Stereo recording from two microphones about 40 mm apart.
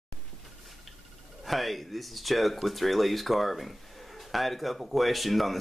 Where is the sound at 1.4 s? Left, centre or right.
Centre.